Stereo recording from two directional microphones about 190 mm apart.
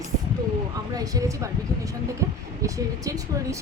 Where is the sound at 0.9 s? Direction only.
20° right (ahead or behind).